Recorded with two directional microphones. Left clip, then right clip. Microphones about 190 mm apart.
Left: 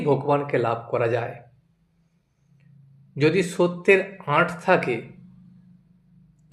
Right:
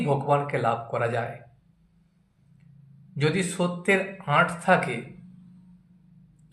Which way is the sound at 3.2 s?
35° left (ahead or behind).